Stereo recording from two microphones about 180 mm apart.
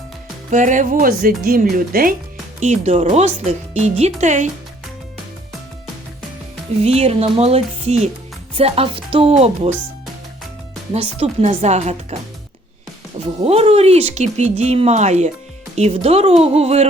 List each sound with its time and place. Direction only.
0.5 s music: 45° right (ahead or behind)
2.6 s speech: 40° right (ahead or behind)
6.8 s speech: 35° right (ahead or behind)
10.9 s speech: 35° right (ahead or behind)
13.2 s speech: 35° right (ahead or behind)